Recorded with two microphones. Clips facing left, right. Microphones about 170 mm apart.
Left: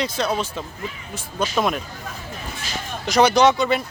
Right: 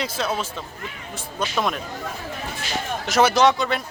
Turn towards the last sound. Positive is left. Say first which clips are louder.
# left 2 dB
turn(degrees=0)  # may be behind; listen again after turning